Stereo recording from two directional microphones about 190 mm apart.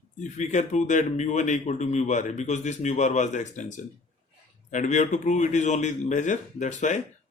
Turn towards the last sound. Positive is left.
turn(degrees=40)  # may be behind; listen again after turning